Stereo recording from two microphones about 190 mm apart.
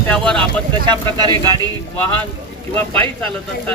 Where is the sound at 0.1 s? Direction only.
5° left (ahead or behind).